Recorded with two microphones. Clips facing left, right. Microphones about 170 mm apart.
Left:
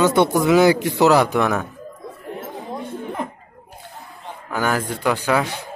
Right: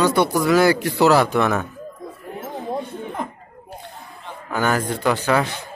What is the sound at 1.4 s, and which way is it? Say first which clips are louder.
Speech: even; centre (ahead or behind).